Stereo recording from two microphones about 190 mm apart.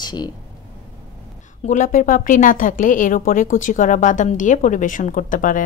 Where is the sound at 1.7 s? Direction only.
45° left (ahead or behind).